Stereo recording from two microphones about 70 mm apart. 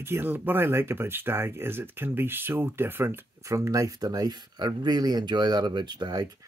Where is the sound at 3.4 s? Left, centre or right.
Right.